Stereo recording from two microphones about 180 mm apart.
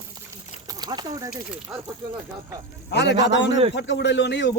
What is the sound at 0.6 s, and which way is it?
Speech, 20° right (ahead or behind).